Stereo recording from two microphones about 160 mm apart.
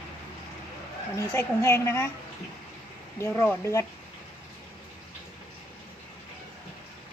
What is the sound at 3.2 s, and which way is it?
Speech, 15° left (ahead or behind).